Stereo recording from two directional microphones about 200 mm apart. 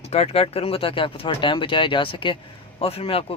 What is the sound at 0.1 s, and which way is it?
A man's voice, 30° left (ahead or behind).